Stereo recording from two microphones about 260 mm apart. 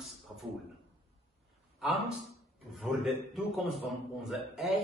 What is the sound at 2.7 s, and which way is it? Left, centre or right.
A man's voice, centre.